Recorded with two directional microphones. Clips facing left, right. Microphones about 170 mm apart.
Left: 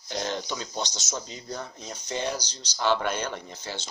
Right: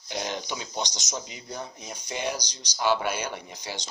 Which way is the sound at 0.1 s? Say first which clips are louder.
Left 1 dB; 15° right (ahead or behind).